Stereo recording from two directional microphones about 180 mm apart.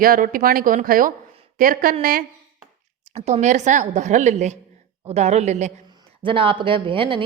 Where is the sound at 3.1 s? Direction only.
40° right (ahead or behind).